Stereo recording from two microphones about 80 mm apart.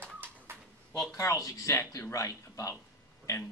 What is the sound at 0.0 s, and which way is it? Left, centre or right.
Bird, right.